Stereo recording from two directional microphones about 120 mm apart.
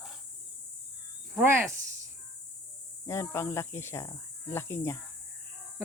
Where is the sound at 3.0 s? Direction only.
20° left (ahead or behind).